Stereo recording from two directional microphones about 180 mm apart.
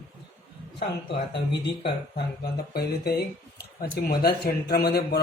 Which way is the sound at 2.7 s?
60° left (ahead or behind).